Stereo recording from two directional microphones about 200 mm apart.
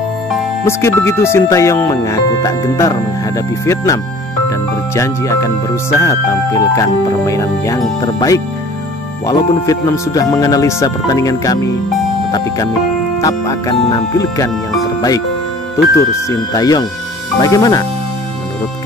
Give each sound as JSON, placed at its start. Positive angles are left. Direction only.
{"t": 0.7, "sound": "speech", "side_deg": 15}
{"t": 16.3, "sound": "speech", "side_deg": 20}